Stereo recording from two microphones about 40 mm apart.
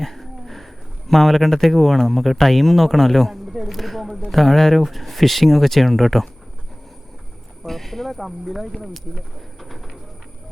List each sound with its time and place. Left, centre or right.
0.0 s speech: centre
7.6 s speech: centre